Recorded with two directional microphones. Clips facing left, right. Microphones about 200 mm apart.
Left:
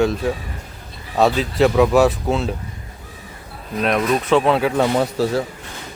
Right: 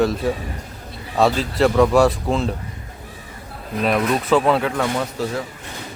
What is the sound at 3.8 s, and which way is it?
Speech, centre (ahead or behind).